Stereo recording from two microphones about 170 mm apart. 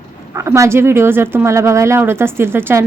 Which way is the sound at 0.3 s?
15° right (ahead or behind).